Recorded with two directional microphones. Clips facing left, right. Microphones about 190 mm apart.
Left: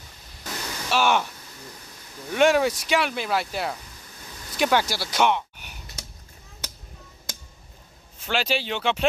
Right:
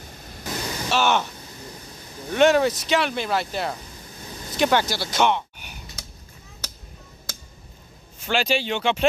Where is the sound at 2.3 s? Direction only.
5° left (ahead or behind).